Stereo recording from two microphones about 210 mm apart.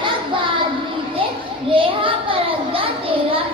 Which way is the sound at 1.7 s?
25° right (ahead or behind).